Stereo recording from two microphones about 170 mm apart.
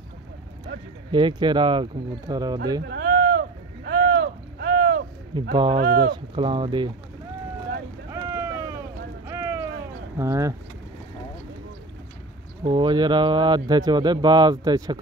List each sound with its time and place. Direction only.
1.1 s speech: 25° right (ahead or behind)
2.9 s a sound: 75° right (ahead or behind)
5.5 s speech: 25° right (ahead or behind)
5.8 s speech: 65° right (ahead or behind)
6.3 s speech: 30° right (ahead or behind)
8.1 s boat: 15° right (ahead or behind)
9.3 s a sound: 15° right (ahead or behind)
10.1 s speech: 20° right (ahead or behind)
12.6 s speech: 25° right (ahead or behind)